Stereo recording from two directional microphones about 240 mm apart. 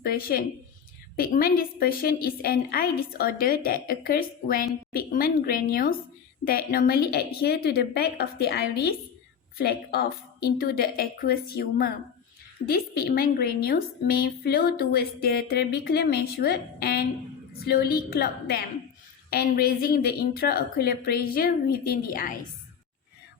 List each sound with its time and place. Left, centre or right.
0.0 s a woman's voice: left